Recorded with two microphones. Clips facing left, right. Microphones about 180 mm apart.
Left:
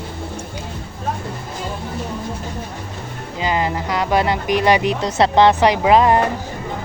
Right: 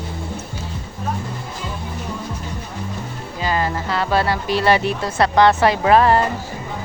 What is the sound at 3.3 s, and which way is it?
Speech, 20° left (ahead or behind).